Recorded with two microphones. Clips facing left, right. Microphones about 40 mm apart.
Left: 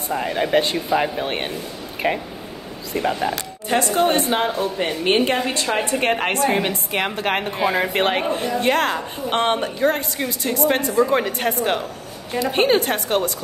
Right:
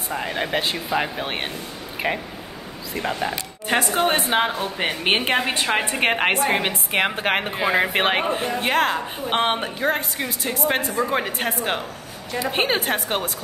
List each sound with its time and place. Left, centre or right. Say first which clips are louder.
0.1 s speech: left 5 dB; centre
3.6 s a woman's voice: left 2 dB; right